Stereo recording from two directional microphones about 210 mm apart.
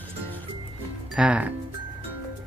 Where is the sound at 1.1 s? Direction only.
5° right (ahead or behind).